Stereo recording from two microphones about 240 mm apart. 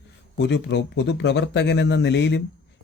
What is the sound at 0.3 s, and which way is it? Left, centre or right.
Speech, left.